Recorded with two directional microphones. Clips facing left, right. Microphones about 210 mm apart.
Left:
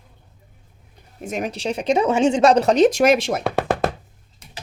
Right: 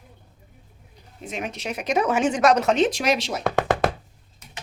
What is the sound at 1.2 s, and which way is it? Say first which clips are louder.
Speech: left 5 dB; 45° left (ahead or behind).